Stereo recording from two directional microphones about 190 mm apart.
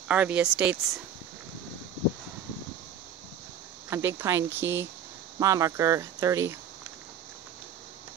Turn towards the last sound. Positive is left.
turn(degrees=-15)  # may be behind; listen again after turning